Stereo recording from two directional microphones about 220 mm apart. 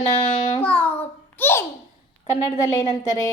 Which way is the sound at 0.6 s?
5° left (ahead or behind).